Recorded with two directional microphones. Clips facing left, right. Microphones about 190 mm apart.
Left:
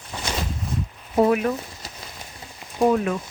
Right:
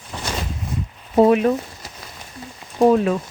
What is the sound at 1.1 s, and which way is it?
Speech, 25° right (ahead or behind).